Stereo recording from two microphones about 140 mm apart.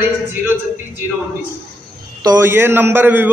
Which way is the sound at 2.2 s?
20° right (ahead or behind).